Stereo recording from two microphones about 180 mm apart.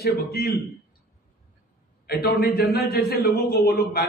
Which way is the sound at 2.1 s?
60° left (ahead or behind).